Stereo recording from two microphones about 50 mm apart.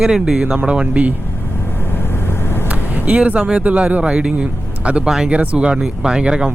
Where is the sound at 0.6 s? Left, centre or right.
Right.